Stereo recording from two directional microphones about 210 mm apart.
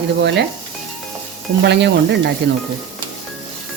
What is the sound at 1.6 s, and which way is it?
Speech, 55° right (ahead or behind).